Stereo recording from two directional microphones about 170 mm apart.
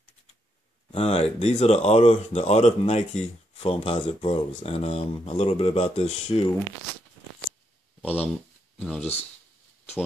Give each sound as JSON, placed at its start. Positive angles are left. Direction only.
{"t": 0.9, "sound": "speech", "side_deg": 35}
{"t": 8.0, "sound": "speech", "side_deg": 10}